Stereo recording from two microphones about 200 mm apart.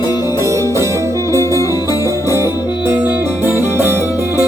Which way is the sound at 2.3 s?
10° right (ahead or behind).